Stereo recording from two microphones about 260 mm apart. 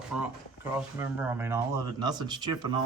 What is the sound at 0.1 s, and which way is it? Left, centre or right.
Speech, centre.